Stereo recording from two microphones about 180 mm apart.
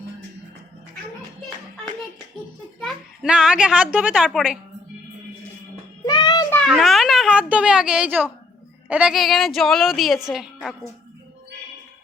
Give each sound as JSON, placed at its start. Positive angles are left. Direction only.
{"t": 2.8, "sound": "a child's voice", "side_deg": -5}
{"t": 6.1, "sound": "child singing", "side_deg": 25}
{"t": 6.5, "sound": "a woman's voice", "side_deg": 5}